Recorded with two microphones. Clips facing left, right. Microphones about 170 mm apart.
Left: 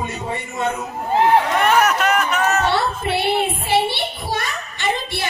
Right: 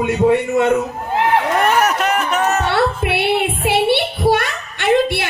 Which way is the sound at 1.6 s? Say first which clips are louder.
Right 1 dB; 35° right (ahead or behind).